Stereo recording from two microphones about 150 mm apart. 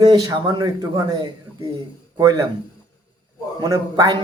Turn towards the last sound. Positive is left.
turn(degrees=-25)  # may be behind; listen again after turning